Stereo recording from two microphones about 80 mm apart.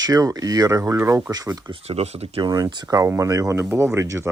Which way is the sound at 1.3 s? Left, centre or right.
Right.